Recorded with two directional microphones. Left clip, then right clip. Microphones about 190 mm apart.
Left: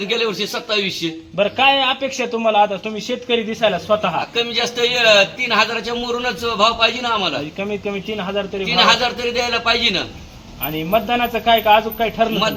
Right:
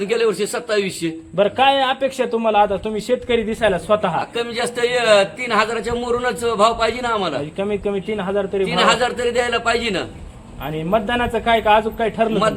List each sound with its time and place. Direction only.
0.1 s a man's voice: 20° right (ahead or behind)
1.4 s a man's voice: 40° right (ahead or behind)
4.4 s a man's voice: 20° right (ahead or behind)
7.6 s a man's voice: 40° right (ahead or behind)
8.7 s a man's voice: 20° right (ahead or behind)
10.9 s a man's voice: 40° right (ahead or behind)